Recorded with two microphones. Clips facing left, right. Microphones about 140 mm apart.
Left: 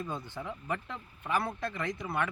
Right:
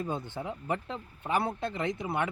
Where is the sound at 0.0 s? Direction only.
25° right (ahead or behind).